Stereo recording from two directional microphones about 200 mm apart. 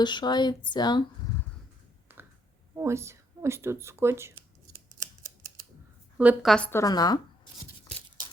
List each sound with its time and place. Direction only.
0.0 s speech: 20° left (ahead or behind)
2.1 s a sound: 10° right (ahead or behind)
2.7 s speech: 15° right (ahead or behind)
6.1 s a woman's voice: 5° right (ahead or behind)
6.7 s speech: 15° left (ahead or behind)